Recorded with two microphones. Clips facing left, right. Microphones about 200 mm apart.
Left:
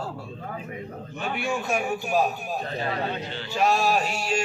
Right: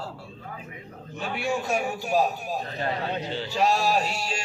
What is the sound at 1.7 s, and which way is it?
Speech, 15° left (ahead or behind).